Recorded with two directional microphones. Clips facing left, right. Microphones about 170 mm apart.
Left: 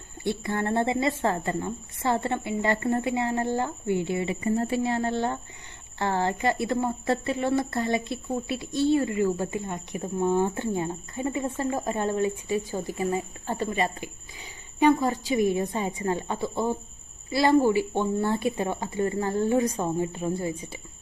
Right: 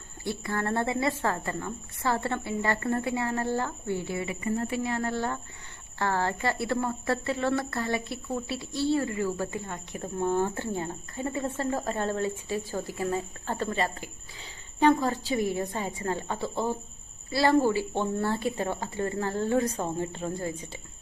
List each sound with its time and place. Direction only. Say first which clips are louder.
0.3 s a woman's voice: left 3 dB; 25° left (ahead or behind)